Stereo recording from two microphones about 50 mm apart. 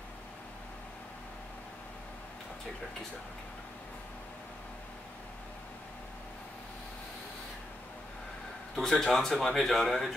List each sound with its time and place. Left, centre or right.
8.7 s speech: centre